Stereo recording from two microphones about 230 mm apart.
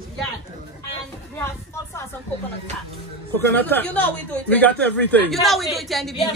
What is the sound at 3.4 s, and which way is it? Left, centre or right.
A woman's voice, centre.